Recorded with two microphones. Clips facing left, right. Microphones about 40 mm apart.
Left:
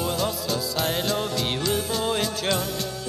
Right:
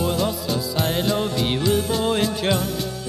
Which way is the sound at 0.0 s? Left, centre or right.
Centre.